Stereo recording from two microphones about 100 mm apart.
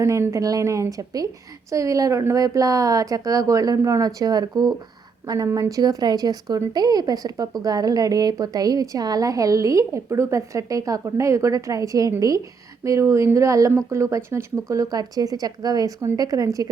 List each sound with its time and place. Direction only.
0.0 s a woman's voice: 30° right (ahead or behind)